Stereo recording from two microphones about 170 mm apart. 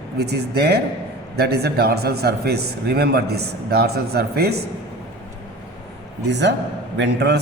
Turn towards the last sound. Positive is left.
turn(degrees=-85)